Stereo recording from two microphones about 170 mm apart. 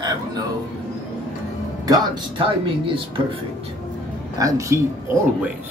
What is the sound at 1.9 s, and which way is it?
Speech, 30° right (ahead or behind).